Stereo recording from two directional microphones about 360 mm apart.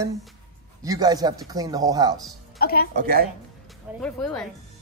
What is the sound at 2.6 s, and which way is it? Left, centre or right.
Speech, left.